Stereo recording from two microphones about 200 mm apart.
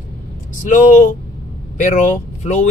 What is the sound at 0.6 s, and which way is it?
Speech, 40° left (ahead or behind).